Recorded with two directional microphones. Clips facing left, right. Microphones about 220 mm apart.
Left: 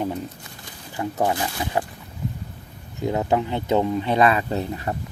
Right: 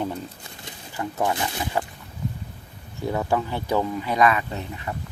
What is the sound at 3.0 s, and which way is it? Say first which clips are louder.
Speech: left 2 dB; 20° left (ahead or behind).